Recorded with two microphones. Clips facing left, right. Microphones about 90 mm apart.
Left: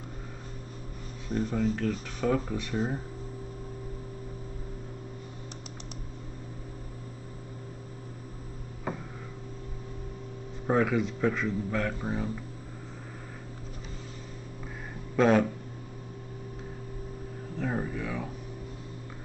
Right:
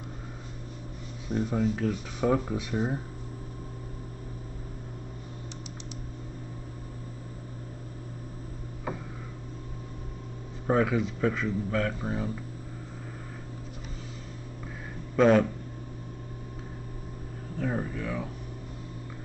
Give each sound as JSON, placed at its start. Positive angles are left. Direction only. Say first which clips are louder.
{"t": 1.3, "sound": "speech", "louder": "right 1 dB", "side_deg": -5}
{"t": 10.7, "sound": "speech", "louder": "right 1 dB", "side_deg": 0}
{"t": 15.1, "sound": "speech", "louder": "right 2 dB", "side_deg": 0}
{"t": 17.6, "sound": "a sound", "louder": "right 1 dB", "side_deg": 5}